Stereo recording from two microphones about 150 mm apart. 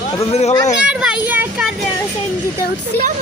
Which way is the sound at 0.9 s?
5° right (ahead or behind).